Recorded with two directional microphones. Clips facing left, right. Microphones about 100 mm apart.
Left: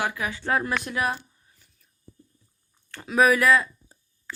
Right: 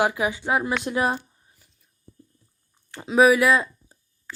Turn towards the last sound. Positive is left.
turn(degrees=-15)  # may be behind; listen again after turning